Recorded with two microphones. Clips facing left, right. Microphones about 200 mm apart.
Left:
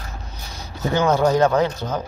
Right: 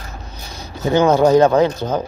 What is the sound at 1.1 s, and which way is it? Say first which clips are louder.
Speech: right 5 dB; 20° right (ahead or behind).